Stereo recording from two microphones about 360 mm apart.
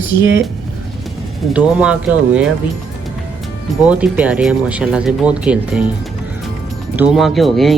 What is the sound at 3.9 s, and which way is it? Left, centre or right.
Speech, centre.